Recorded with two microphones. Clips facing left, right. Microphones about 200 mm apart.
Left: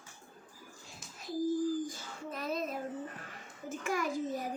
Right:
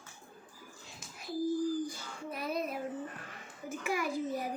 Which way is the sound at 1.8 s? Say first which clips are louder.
Right 1 dB; 10° right (ahead or behind).